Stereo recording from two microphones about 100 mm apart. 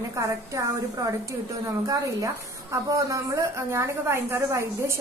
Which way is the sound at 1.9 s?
35° right (ahead or behind).